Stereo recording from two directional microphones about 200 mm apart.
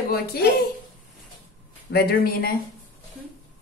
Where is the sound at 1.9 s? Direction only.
50° left (ahead or behind).